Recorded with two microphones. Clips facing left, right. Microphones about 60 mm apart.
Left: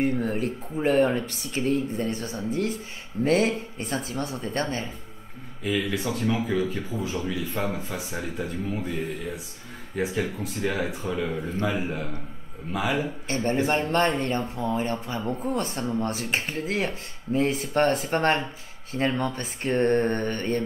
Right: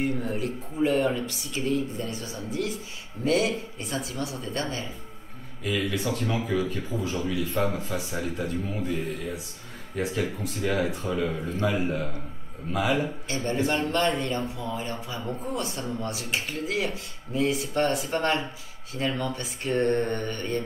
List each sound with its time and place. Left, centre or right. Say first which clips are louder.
0.0 s speech: left 3 dB; left
5.6 s speech: left 1 dB; centre
13.3 s speech: left 3 dB; left